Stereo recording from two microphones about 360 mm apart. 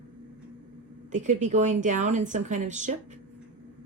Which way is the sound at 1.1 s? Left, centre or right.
Centre.